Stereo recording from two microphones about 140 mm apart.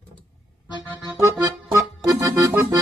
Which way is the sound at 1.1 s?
20° right (ahead or behind).